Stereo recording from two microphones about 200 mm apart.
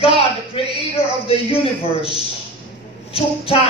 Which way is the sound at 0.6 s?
30° left (ahead or behind).